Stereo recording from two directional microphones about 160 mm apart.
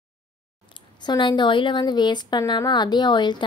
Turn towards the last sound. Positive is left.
turn(degrees=30)  # may be behind; listen again after turning